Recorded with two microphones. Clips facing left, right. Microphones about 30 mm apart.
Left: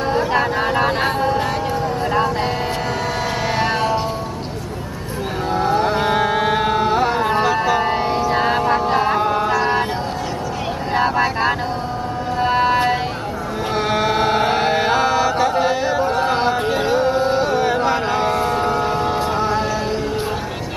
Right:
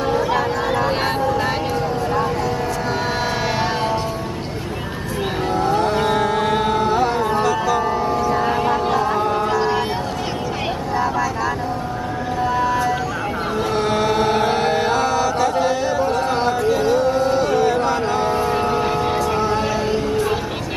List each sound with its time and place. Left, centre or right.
0.4 s a sound: left
5.5 s carnatic music: centre
7.2 s music: left
7.8 s music: left
9.1 s music: centre
9.5 s a sound: left
11.0 s vehicle: left
12.5 s a sound: left
13.7 s chant: centre
16.5 s music: left
18.7 s vehicle: centre